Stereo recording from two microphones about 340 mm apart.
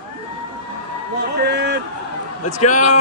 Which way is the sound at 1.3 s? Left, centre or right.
Right.